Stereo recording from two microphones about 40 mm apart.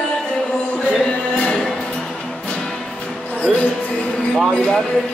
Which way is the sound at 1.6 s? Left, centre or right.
Centre.